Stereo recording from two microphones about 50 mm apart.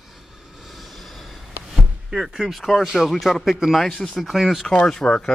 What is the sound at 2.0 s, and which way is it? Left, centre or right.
Speech, centre.